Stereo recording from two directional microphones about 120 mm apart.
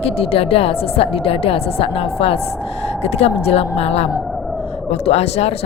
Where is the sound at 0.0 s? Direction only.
55° left (ahead or behind).